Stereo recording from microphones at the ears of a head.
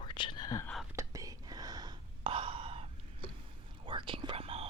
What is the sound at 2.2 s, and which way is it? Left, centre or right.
Gasp, right.